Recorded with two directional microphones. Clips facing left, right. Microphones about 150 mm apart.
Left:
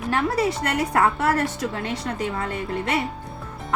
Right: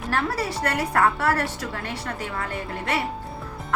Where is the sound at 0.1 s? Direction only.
20° left (ahead or behind).